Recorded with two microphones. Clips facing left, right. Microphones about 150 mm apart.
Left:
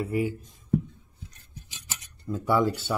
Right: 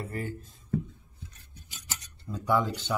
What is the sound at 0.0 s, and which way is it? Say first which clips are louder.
Speech: left 8 dB; 10° left (ahead or behind).